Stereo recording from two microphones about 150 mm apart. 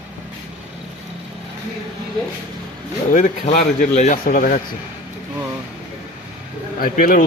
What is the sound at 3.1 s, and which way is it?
A man's voice, 55° left (ahead or behind).